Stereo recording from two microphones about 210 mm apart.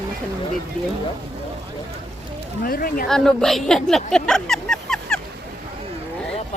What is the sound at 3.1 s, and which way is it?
Speech, centre (ahead or behind).